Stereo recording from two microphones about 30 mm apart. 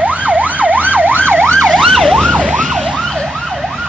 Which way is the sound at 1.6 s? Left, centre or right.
Centre.